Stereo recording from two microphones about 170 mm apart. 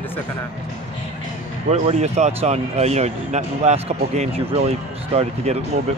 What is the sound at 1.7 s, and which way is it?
Speech, 40° right (ahead or behind).